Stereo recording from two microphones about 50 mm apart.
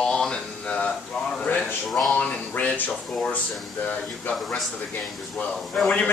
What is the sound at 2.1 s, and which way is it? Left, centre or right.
Speech, left.